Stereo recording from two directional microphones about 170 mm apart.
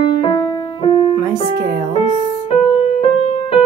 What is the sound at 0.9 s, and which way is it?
Keyboard, 35° left (ahead or behind).